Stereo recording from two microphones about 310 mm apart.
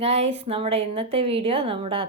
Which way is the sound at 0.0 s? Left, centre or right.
Centre.